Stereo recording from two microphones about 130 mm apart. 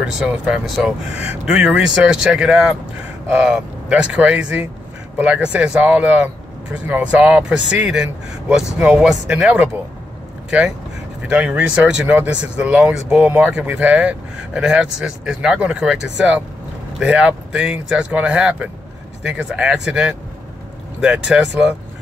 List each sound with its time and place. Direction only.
0.0 s speech: 5° right (ahead or behind)
11.2 s speech: 10° right (ahead or behind)